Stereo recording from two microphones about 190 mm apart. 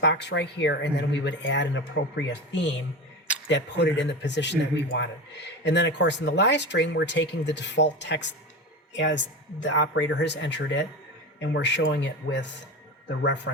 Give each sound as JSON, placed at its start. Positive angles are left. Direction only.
{"t": 0.0, "sound": "speech", "side_deg": 65}